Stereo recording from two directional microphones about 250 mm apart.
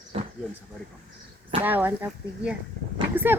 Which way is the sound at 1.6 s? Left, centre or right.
Centre.